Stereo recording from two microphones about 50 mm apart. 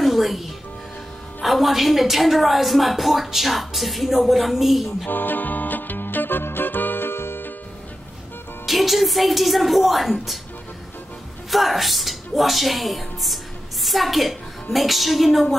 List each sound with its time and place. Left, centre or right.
0.0 s music: centre
1.4 s a woman's voice: centre
5.0 s music: left
8.6 s a woman's voice: centre
11.5 s a woman's voice: centre